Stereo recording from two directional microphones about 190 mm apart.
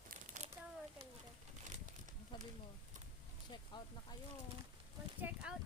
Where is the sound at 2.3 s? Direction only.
25° left (ahead or behind).